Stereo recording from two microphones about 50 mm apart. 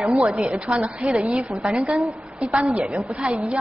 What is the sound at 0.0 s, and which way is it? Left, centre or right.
Speech, centre.